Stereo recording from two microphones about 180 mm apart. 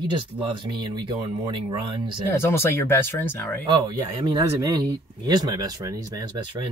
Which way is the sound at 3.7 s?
25° right (ahead or behind).